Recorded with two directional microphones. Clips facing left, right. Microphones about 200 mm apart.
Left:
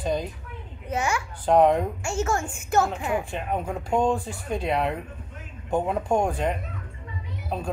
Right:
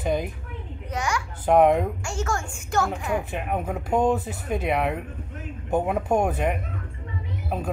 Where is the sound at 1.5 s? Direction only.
10° right (ahead or behind).